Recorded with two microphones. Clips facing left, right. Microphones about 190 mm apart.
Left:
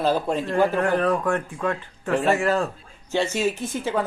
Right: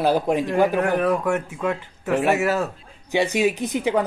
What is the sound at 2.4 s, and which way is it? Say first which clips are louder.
Speech: even; 5° right (ahead or behind).